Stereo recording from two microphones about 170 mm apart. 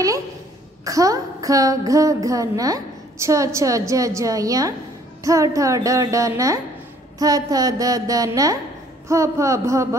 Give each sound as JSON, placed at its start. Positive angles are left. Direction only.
{"t": 0.8, "sound": "a woman's voice", "side_deg": -20}